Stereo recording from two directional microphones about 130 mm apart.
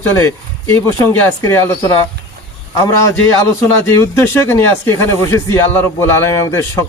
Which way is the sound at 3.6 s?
20° left (ahead or behind).